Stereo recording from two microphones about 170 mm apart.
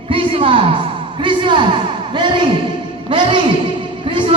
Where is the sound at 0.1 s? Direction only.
30° right (ahead or behind).